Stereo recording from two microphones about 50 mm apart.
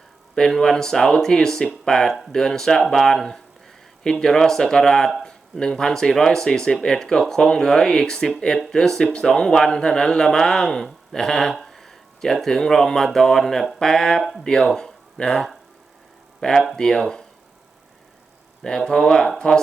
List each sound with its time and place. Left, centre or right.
0.3 s a man's voice: centre
14.2 s speech: centre
14.4 s a man's voice: centre
18.6 s a man's voice: centre